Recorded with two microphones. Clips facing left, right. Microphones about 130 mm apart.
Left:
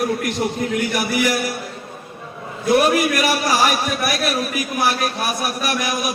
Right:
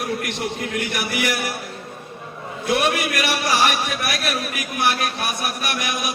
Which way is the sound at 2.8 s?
40° left (ahead or behind).